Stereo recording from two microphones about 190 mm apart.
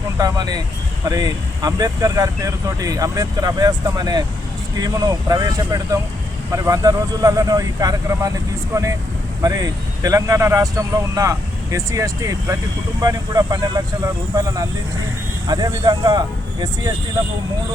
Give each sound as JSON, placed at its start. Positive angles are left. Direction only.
{"t": 0.2, "sound": "speech", "side_deg": -20}